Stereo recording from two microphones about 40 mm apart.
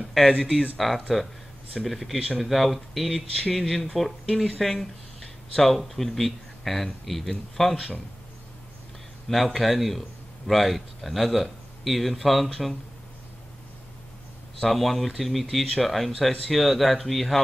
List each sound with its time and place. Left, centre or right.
0.7 s speech: centre
2.1 s speech: centre
2.4 s speech: centre
9.3 s speech: centre
14.6 s speech: centre